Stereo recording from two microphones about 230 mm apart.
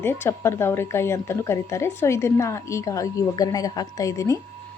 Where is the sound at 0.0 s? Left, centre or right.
Centre.